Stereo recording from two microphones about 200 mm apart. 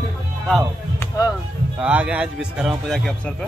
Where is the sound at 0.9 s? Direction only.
15° left (ahead or behind).